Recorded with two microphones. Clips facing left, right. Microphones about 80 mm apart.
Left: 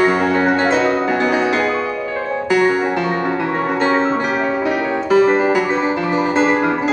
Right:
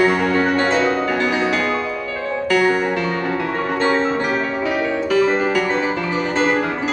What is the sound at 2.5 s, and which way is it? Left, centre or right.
Music, centre.